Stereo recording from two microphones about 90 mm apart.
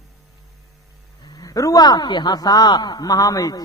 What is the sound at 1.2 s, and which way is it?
Speech, 50° left (ahead or behind).